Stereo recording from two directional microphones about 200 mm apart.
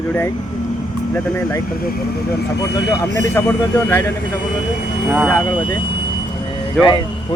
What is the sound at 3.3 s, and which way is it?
Speech, 15° left (ahead or behind).